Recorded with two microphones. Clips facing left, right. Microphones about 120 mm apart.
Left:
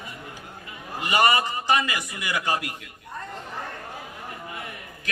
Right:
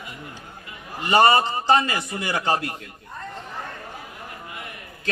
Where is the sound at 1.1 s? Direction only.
35° right (ahead or behind).